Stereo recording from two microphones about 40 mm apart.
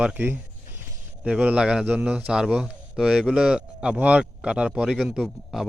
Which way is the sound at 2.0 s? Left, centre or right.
Right.